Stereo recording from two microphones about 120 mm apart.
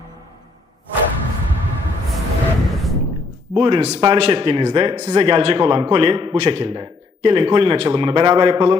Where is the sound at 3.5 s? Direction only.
45° right (ahead or behind).